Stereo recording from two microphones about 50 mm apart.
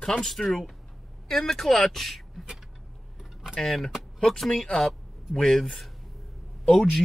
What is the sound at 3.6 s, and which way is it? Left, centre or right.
Speech, centre.